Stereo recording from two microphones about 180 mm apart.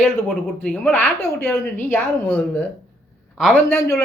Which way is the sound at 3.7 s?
15° left (ahead or behind).